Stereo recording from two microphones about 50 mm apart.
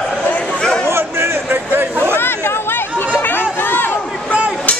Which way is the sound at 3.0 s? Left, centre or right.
Left.